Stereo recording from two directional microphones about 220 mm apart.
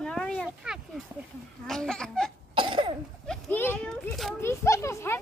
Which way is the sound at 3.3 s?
10° left (ahead or behind).